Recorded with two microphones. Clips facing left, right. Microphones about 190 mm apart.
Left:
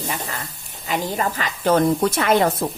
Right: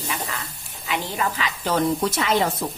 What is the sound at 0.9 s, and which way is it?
Speech, 45° left (ahead or behind).